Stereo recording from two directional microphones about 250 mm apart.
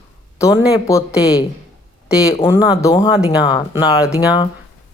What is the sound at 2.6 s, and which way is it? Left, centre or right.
Speech, centre.